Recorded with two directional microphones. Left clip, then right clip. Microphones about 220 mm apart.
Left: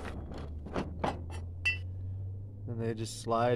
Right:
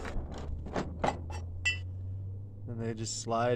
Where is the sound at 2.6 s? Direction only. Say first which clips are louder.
Left 2 dB; 20° left (ahead or behind).